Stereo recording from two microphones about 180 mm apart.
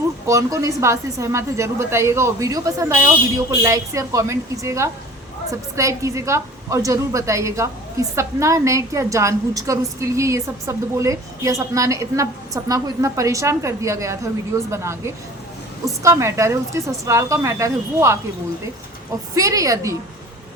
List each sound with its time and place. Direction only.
0.3 s a woman's voice: 20° right (ahead or behind)
19.4 s a woman's voice: 20° right (ahead or behind)